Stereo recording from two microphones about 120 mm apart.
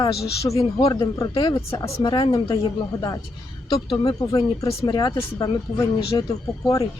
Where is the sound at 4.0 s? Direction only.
30° left (ahead or behind).